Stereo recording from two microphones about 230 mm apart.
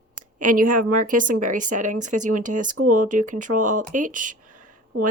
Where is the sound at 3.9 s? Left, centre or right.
Right.